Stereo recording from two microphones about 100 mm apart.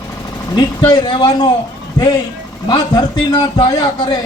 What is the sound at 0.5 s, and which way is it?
Speech, 50° left (ahead or behind).